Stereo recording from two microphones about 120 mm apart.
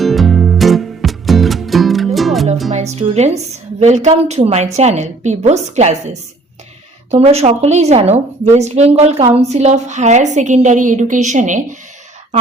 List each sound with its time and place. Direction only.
0.0 s music: centre (ahead or behind)
2.7 s a woman's voice: 70° right (ahead or behind)
7.1 s a woman's voice: 60° right (ahead or behind); by 11.8 s 90° right